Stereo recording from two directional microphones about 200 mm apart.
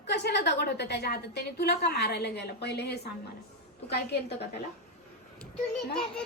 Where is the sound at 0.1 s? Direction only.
55° left (ahead or behind).